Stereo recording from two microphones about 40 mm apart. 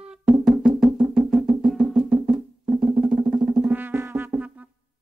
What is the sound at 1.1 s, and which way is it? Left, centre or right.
Music, centre.